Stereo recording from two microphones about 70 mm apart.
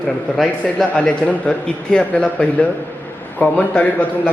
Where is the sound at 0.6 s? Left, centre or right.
Centre.